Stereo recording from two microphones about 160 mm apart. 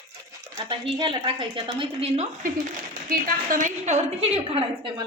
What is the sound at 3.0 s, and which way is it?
A woman's voice, 65° right (ahead or behind).